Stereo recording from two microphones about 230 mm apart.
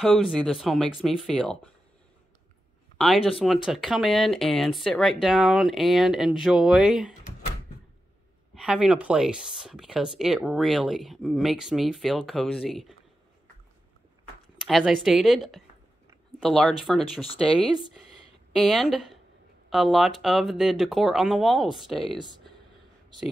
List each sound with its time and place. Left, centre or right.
0.0 s speech: centre
3.0 s speech: centre
8.5 s speech: centre
14.7 s speech: centre